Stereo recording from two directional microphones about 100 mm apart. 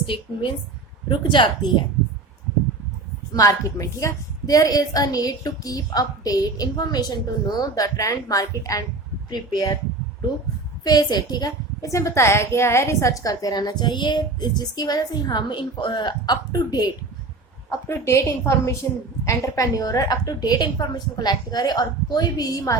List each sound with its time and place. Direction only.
0.0 s a woman's voice: 60° left (ahead or behind)
3.3 s a woman's voice: 35° left (ahead or behind)
10.8 s a woman's voice: 40° left (ahead or behind)
17.7 s a woman's voice: 25° left (ahead or behind)